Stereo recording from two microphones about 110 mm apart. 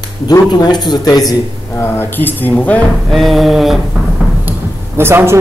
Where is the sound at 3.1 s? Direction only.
Centre (ahead or behind).